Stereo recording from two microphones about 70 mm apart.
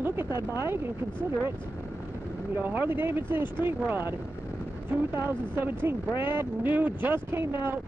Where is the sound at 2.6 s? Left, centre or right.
Right.